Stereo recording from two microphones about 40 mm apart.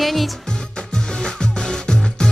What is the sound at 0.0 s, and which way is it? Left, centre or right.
Music, centre.